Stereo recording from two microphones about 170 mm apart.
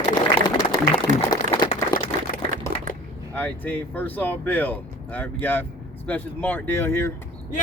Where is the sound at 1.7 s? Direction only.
55° left (ahead or behind).